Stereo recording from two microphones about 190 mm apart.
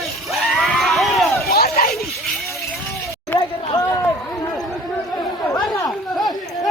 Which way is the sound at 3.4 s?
20° left (ahead or behind).